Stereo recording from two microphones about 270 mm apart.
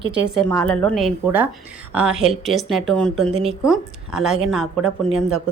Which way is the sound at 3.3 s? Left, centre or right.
Right.